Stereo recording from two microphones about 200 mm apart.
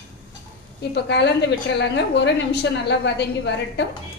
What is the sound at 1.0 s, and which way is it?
A woman's voice, 60° left (ahead or behind).